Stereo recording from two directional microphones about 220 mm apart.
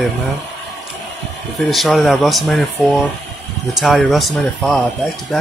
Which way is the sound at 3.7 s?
Centre (ahead or behind).